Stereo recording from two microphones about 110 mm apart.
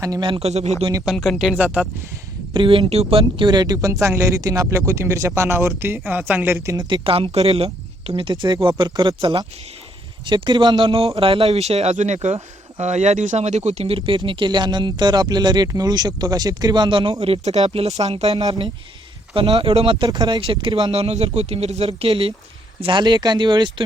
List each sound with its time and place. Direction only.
0.2 s speech: 50° right (ahead or behind)
0.4 s speech: 80° right
1.0 s speech: centre (ahead or behind)
2.5 s speech: 50° right (ahead or behind); by 6.6 s 15° right (ahead or behind)
6.7 s speech: 50° right (ahead or behind)
18.3 s speech: 40° right (ahead or behind)
19.3 s speech: 55° right (ahead or behind)
20.1 s speech: 40° right (ahead or behind)
20.9 s speech: 70° right (ahead or behind)
22.8 s speech: 45° right (ahead or behind)